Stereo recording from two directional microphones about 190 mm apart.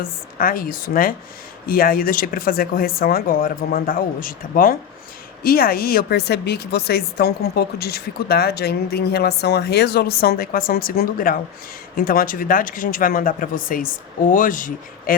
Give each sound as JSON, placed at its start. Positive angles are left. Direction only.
{"t": 0.0, "sound": "speech", "side_deg": 50}